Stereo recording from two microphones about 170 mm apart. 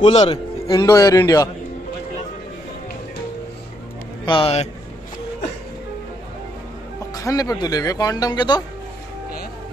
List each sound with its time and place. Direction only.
0.0 s a man's voice: 35° left (ahead or behind)
0.7 s speech: 20° left (ahead or behind)
4.3 s speech: 35° left (ahead or behind)
7.2 s speech: 20° left (ahead or behind)